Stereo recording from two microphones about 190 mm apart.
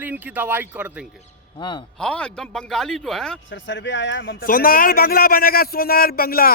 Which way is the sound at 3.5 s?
75° left (ahead or behind).